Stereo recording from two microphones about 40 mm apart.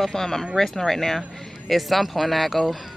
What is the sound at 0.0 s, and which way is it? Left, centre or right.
Speech, centre.